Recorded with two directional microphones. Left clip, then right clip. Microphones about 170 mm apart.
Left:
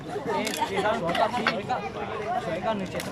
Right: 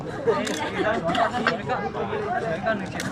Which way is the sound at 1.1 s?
25° left (ahead or behind).